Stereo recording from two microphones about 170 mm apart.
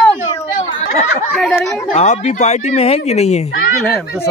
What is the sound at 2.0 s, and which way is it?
Speech, 45° left (ahead or behind).